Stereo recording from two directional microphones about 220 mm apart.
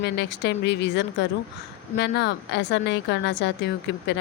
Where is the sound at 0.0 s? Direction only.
50° left (ahead or behind).